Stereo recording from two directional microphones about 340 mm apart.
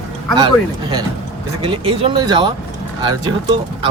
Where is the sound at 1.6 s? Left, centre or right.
Centre.